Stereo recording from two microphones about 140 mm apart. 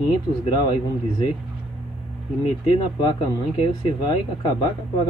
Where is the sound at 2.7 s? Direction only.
35° left (ahead or behind).